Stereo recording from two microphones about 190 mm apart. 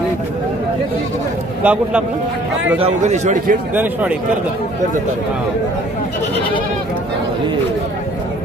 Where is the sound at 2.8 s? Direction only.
40° right (ahead or behind).